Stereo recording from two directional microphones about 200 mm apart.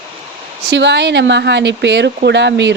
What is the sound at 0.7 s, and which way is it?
A woman's voice, 60° right (ahead or behind).